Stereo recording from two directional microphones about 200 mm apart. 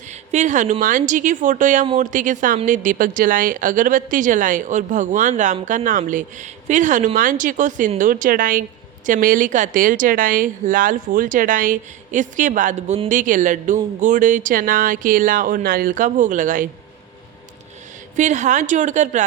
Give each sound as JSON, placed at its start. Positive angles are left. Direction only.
{"t": 0.1, "sound": "a woman's voice", "side_deg": -35}
{"t": 18.2, "sound": "speech", "side_deg": -35}